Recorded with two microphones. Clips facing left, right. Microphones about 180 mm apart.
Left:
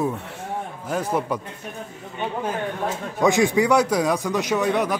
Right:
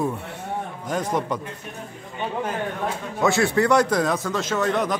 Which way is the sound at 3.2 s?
15° left (ahead or behind).